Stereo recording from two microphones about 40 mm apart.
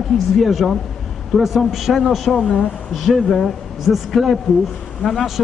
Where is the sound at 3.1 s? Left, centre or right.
Left.